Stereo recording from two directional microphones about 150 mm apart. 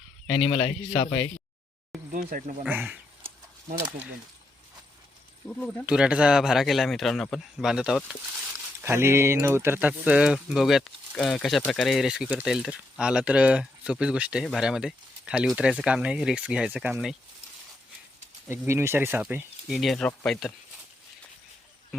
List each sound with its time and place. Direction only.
0.3 s speech: 40° left (ahead or behind)
2.1 s speech: 60° right (ahead or behind)
5.5 s speech: 5° left (ahead or behind)
5.8 s speech: 5° right (ahead or behind)
8.8 s speech: 15° right (ahead or behind)
18.4 s speech: 15° right (ahead or behind)
19.7 s speech: centre (ahead or behind)